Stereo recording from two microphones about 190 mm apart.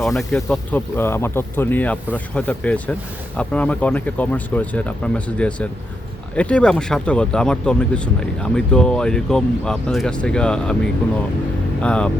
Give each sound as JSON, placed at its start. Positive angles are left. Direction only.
{"t": 0.0, "sound": "speech", "side_deg": 0}
{"t": 11.8, "sound": "speech", "side_deg": 5}